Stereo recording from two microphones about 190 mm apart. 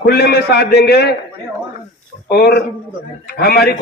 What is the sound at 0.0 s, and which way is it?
Speech, 55° left (ahead or behind).